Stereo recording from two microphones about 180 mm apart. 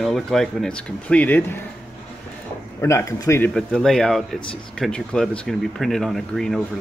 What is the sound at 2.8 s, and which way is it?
Speech, 15° left (ahead or behind).